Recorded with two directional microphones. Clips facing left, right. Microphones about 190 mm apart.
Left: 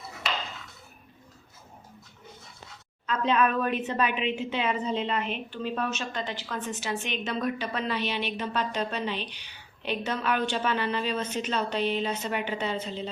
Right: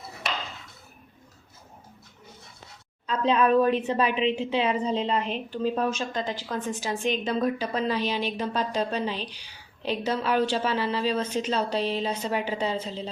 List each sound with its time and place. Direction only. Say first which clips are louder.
3.1 s a woman's voice: right 3 dB; 30° right (ahead or behind)